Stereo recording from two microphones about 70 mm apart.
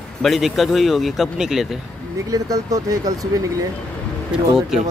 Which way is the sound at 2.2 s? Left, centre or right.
Right.